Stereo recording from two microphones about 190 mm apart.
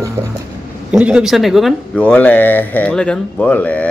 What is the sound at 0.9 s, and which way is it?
Speech, 5° right (ahead or behind).